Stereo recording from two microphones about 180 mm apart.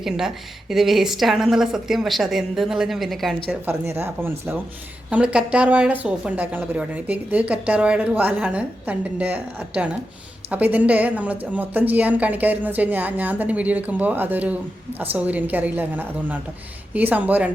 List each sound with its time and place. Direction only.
0.0 s a woman's voice: centre (ahead or behind)
3.7 s a woman's voice: 15° right (ahead or behind)